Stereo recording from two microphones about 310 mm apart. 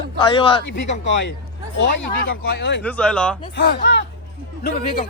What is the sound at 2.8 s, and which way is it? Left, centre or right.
Speech, centre.